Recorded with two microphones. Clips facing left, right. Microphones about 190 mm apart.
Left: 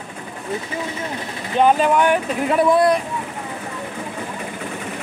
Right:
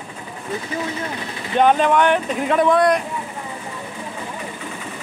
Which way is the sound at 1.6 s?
5° left (ahead or behind).